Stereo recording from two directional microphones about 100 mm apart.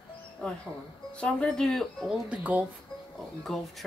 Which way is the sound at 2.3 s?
15° right (ahead or behind).